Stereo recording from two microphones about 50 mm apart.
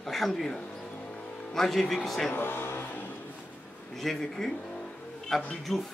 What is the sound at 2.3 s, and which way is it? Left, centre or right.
Music, left.